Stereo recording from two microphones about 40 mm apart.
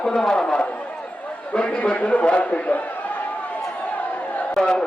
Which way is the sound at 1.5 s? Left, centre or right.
Left.